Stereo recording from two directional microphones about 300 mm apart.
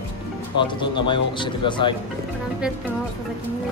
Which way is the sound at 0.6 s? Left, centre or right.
Centre.